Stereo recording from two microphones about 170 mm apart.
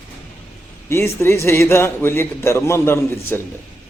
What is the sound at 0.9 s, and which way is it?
A man's voice, 15° left (ahead or behind).